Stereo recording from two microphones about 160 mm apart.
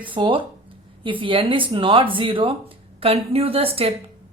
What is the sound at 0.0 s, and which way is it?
A woman's voice, 30° right (ahead or behind).